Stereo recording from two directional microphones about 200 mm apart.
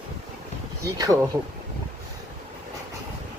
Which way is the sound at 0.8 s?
15° right (ahead or behind).